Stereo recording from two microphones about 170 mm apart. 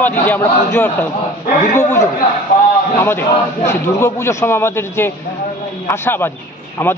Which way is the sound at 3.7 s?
15° left (ahead or behind).